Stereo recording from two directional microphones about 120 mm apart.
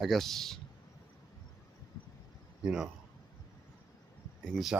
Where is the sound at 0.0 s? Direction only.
Centre (ahead or behind).